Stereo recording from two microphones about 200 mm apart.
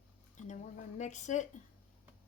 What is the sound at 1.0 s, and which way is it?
Speech, 35° left (ahead or behind).